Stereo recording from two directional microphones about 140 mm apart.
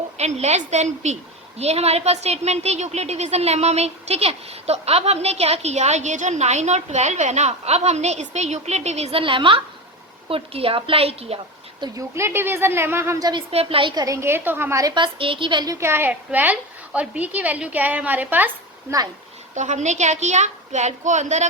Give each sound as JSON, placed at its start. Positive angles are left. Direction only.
{"t": 0.2, "sound": "a woman's voice", "side_deg": -50}
{"t": 11.8, "sound": "a woman's voice", "side_deg": -20}
{"t": 13.5, "sound": "a woman's voice", "side_deg": -45}
{"t": 14.0, "sound": "a woman's voice", "side_deg": -20}
{"t": 19.5, "sound": "a woman's voice", "side_deg": -55}